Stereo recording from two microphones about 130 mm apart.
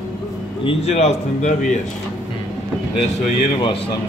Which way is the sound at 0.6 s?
55° left (ahead or behind).